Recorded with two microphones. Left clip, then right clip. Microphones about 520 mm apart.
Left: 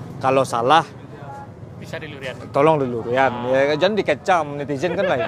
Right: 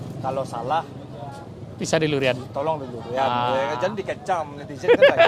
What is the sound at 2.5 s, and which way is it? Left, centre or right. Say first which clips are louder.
A man's voice: left 9 dB; left.